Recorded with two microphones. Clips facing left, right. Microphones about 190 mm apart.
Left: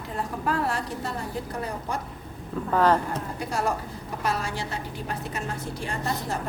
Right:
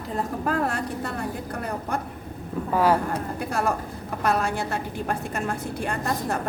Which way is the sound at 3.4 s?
55° right (ahead or behind).